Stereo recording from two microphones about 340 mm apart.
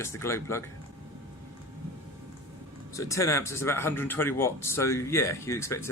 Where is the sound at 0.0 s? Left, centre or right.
Centre.